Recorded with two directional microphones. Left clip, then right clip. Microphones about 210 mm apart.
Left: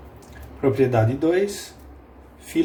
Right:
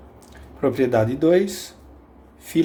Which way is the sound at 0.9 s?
50° right (ahead or behind).